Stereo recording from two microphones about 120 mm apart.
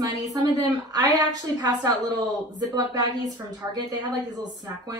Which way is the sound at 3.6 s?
20° right (ahead or behind).